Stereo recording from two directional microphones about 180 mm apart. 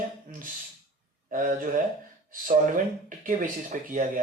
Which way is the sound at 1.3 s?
50° right (ahead or behind).